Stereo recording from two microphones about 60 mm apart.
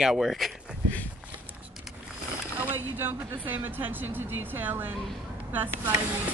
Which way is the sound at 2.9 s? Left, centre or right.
Right.